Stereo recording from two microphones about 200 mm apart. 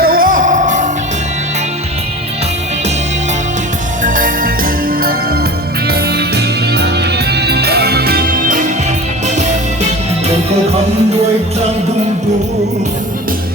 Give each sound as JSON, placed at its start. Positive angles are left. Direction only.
{"t": 0.0, "sound": "music", "side_deg": -45}
{"t": 4.0, "sound": "music", "side_deg": -40}